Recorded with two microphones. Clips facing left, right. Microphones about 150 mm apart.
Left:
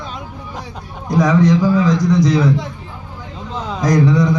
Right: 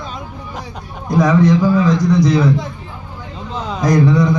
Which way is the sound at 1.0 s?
55° right (ahead or behind).